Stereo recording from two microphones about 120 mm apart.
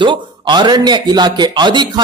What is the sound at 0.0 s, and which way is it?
Speech, 40° right (ahead or behind).